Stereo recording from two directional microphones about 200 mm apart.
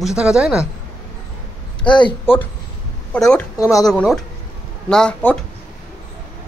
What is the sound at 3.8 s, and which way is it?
Speech, centre (ahead or behind).